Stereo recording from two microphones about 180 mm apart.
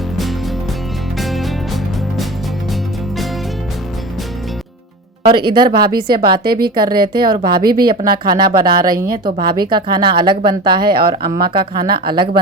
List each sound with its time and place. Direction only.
1.2 s music: centre (ahead or behind)
5.3 s speech: 25° right (ahead or behind)
6.4 s speech: 60° right (ahead or behind)
6.8 s speech: 25° right (ahead or behind)